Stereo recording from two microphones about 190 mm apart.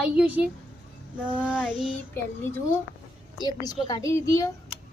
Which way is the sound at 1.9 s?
10° left (ahead or behind).